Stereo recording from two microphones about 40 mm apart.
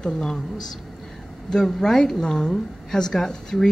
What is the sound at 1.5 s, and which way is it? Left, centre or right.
Speech, centre.